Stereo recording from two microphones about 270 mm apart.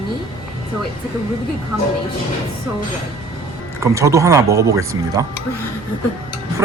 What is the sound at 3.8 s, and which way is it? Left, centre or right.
Speech, centre.